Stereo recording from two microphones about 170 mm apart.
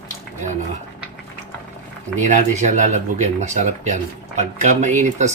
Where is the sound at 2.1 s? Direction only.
45° right (ahead or behind).